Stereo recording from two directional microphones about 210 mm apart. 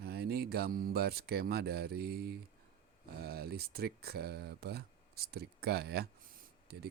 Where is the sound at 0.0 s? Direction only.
50° right (ahead or behind).